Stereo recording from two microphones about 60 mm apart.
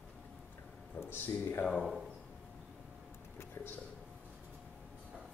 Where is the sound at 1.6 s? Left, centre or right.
Centre.